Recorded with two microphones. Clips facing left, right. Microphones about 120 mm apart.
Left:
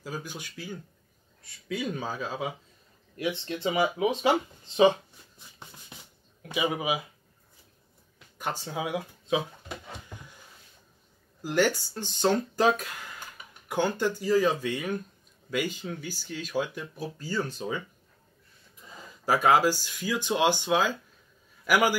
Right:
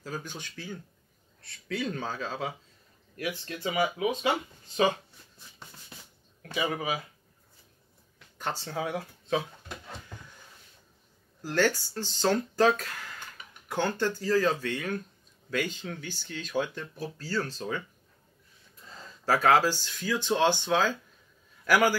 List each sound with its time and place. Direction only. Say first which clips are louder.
0.0 s speech: left 1 dB; 10° left (ahead or behind)
3.2 s speech: left 4 dB; 25° left (ahead or behind)
5.6 s a sound: left 1 dB; 20° left (ahead or behind)
6.4 s speech: left 2 dB; 15° left (ahead or behind)
8.4 s a sound: even; 10° left (ahead or behind)
11.4 s speech: left 1 dB; 15° left (ahead or behind)
18.9 s speech: left 1 dB; 15° left (ahead or behind)